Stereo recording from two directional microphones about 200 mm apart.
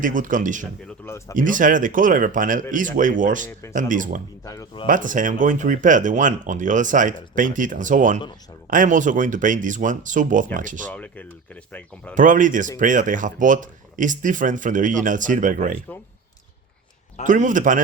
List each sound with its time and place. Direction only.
0.0 s speech: 40° right (ahead or behind)
4.4 s speech: 15° left (ahead or behind)
4.9 s speech: 40° right (ahead or behind)
10.8 s speech: 10° left (ahead or behind)
12.1 s speech: 40° right (ahead or behind)
17.2 s speech: 40° right (ahead or behind)